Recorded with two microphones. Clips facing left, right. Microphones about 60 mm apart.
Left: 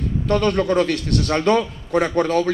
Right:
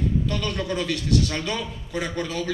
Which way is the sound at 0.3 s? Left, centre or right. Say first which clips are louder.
Left 9 dB; left.